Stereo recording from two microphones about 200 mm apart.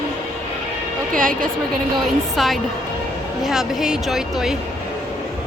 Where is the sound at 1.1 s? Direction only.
45° right (ahead or behind).